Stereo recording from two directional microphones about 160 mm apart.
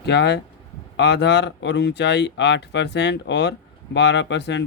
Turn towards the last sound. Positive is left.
turn(degrees=90)